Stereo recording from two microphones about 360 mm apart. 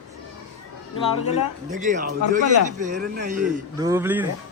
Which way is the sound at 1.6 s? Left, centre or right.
Right.